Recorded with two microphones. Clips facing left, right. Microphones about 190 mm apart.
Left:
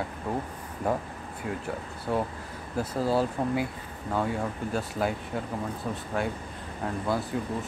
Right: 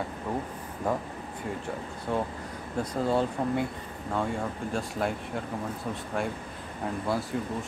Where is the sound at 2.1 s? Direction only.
5° left (ahead or behind).